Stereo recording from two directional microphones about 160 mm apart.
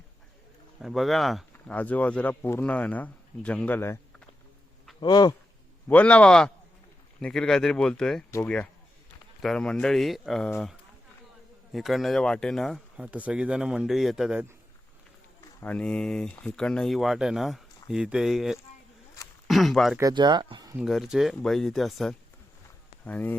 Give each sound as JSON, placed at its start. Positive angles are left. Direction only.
{"t": 0.8, "sound": "speech", "side_deg": 0}
{"t": 4.9, "sound": "speech", "side_deg": 25}
{"t": 5.9, "sound": "speech", "side_deg": 10}
{"t": 8.3, "sound": "speech", "side_deg": 15}
{"t": 9.4, "sound": "speech", "side_deg": 5}
{"t": 11.7, "sound": "speech", "side_deg": 0}
{"t": 15.4, "sound": "speech", "side_deg": 10}
{"t": 20.0, "sound": "speech", "side_deg": -25}
{"t": 20.8, "sound": "speech", "side_deg": 0}